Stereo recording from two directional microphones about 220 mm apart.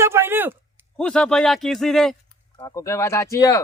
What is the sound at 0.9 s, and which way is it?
A man's voice, 5° left (ahead or behind).